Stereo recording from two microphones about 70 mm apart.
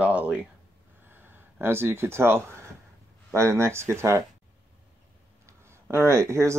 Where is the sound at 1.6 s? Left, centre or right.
Right.